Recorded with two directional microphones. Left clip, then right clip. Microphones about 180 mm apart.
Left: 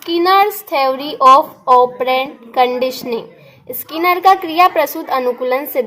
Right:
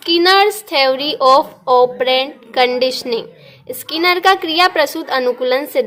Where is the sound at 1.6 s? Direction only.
10° right (ahead or behind).